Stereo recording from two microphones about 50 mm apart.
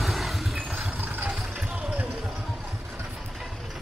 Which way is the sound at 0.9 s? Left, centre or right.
Right.